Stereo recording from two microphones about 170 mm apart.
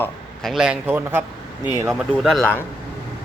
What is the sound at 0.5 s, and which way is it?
Speech, 5° right (ahead or behind).